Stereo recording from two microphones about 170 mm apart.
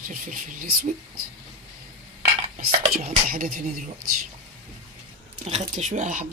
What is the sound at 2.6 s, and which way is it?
Speech, 60° right (ahead or behind).